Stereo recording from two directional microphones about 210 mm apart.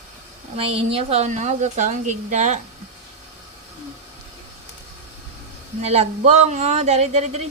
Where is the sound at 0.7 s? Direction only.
30° right (ahead or behind).